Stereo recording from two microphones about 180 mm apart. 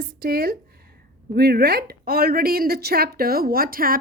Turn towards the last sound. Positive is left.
turn(degrees=-55)  # may be behind; listen again after turning